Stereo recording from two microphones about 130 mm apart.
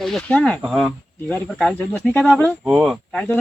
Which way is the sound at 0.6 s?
5° right (ahead or behind).